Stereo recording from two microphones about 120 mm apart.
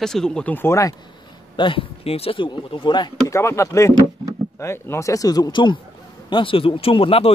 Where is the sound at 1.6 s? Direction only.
45° left (ahead or behind).